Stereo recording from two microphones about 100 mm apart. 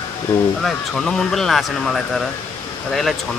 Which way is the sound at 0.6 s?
5° left (ahead or behind).